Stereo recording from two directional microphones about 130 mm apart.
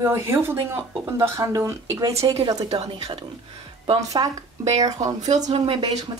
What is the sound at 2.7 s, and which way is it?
Speech, 55° right (ahead or behind).